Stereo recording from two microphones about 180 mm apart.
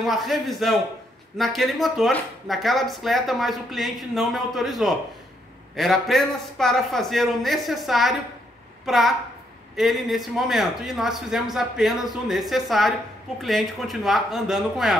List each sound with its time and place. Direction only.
0.0 s a woman's voice: centre (ahead or behind)